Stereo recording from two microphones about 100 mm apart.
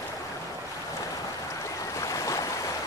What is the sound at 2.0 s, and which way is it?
Stream, 30° left (ahead or behind).